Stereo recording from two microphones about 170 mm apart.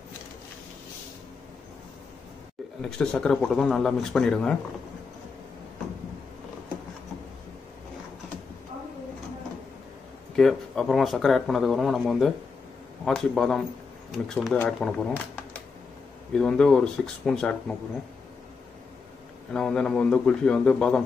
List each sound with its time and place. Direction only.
2.8 s speech: 5° left (ahead or behind)
10.3 s speech: 5° left (ahead or behind)
16.3 s speech: 5° left (ahead or behind)
19.5 s speech: 5° left (ahead or behind)